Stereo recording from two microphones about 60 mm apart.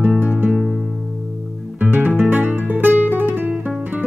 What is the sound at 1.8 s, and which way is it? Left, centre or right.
Guitar, right.